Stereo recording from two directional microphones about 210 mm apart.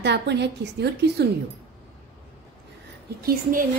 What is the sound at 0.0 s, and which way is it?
A woman's voice, 55° right (ahead or behind).